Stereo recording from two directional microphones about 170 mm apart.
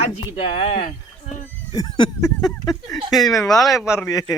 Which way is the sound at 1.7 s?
25° left (ahead or behind).